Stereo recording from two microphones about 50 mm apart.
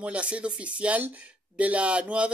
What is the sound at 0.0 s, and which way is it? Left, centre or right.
Speech, right.